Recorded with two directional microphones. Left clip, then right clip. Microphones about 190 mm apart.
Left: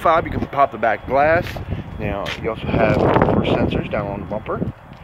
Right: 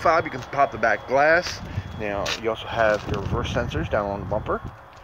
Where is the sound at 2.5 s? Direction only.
Centre (ahead or behind).